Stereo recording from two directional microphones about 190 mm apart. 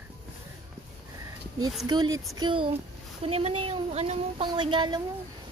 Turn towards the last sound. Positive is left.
turn(degrees=-25)  # may be behind; listen again after turning